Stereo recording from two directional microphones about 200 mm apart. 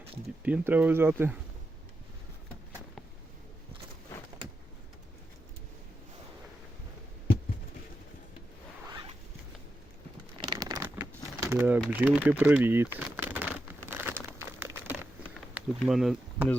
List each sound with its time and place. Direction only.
0.4 s speech: 10° right (ahead or behind)
10.3 s crumpling: 20° right (ahead or behind)
10.9 s a sound: 10° right (ahead or behind)
11.8 s speech: 10° right (ahead or behind)
13.9 s crumpling: 10° right (ahead or behind)
15.8 s speech: centre (ahead or behind)